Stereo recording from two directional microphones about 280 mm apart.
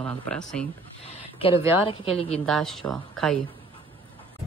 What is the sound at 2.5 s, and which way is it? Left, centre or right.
Speech, centre.